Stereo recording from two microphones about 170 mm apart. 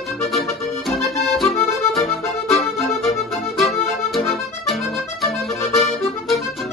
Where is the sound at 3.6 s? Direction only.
Centre (ahead or behind).